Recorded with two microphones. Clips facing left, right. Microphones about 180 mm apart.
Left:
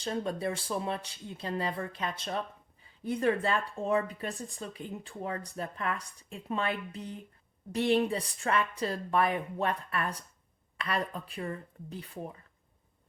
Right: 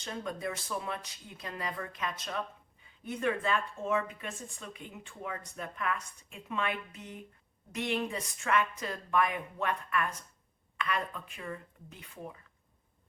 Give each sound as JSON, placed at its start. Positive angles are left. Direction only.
{"t": 0.0, "sound": "speech", "side_deg": 30}